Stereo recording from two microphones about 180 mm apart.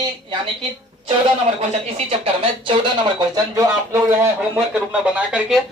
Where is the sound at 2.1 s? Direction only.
30° right (ahead or behind).